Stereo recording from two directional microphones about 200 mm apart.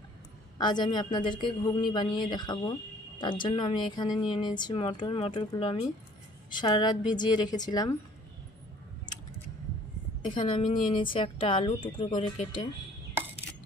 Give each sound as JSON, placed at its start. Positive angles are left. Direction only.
{"t": 0.6, "sound": "speech", "side_deg": 20}
{"t": 10.2, "sound": "speech", "side_deg": 25}